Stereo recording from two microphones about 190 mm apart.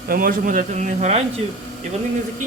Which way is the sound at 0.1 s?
45° right (ahead or behind).